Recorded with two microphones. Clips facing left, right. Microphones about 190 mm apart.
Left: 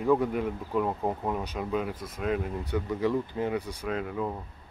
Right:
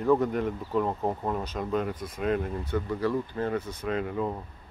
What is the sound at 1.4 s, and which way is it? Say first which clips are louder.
Speech: right 1 dB; 15° left (ahead or behind).